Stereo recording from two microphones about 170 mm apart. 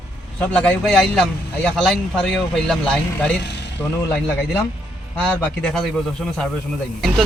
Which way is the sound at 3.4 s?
90° left.